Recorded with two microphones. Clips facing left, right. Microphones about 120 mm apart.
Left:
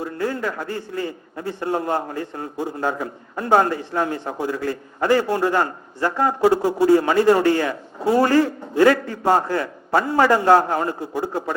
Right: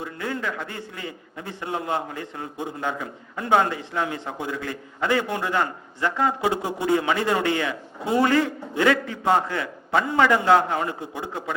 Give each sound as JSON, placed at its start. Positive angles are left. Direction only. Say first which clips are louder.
{"t": 0.0, "sound": "a man's voice", "louder": "left 5 dB", "side_deg": 35}
{"t": 6.7, "sound": "a man's voice", "louder": "left 8 dB", "side_deg": -20}
{"t": 6.9, "sound": "a man's voice", "louder": "left 6 dB", "side_deg": 35}